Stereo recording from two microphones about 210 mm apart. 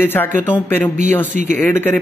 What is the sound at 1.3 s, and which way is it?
Speech, 35° right (ahead or behind).